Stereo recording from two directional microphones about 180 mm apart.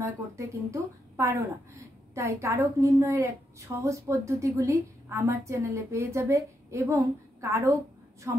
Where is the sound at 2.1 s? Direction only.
15° right (ahead or behind).